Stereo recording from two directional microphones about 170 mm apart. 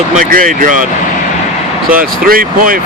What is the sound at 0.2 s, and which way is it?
Speech, 55° right (ahead or behind).